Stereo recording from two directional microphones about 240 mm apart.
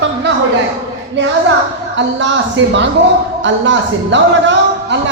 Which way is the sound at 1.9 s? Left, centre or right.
Right.